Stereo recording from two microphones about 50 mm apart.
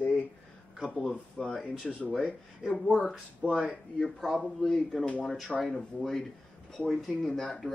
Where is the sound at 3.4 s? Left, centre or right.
Right.